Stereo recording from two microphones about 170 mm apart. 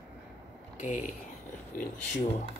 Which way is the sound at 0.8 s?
50° left (ahead or behind).